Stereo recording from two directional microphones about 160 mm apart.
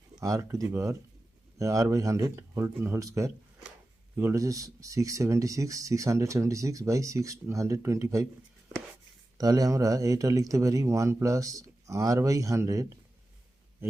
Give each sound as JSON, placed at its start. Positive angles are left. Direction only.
{"t": 0.2, "sound": "speech", "side_deg": -20}
{"t": 9.4, "sound": "speech", "side_deg": -25}